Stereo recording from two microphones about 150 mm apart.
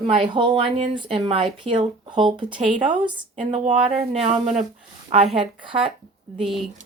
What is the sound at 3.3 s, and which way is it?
Speech, 50° right (ahead or behind).